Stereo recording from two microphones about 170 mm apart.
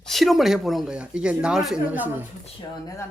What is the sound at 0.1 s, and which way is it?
Speech, centre (ahead or behind).